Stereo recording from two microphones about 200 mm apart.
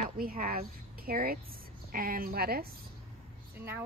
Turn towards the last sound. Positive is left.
turn(degrees=-10)  # may be behind; listen again after turning